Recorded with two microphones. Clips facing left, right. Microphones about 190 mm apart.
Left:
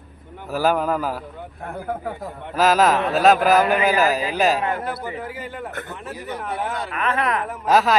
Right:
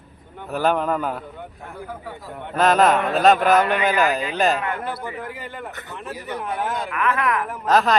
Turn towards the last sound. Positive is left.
turn(degrees=5)  # may be behind; listen again after turning